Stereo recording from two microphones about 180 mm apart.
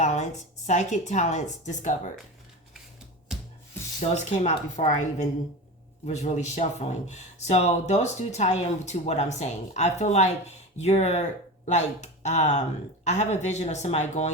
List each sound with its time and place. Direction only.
0.0 s speech: 40° left (ahead or behind)
4.1 s speech: 40° left (ahead or behind)